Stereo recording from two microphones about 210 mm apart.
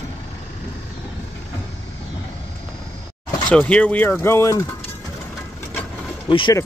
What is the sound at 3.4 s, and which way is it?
Speech, 5° left (ahead or behind).